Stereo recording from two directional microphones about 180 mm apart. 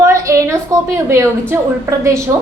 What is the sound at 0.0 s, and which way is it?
A woman's voice, 15° right (ahead or behind).